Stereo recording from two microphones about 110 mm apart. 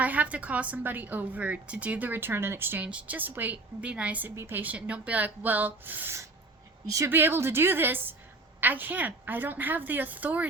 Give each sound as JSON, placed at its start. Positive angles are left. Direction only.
{"t": 0.0, "sound": "a woman's voice", "side_deg": -15}